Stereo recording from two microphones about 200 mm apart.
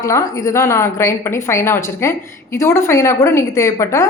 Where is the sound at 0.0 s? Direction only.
15° left (ahead or behind).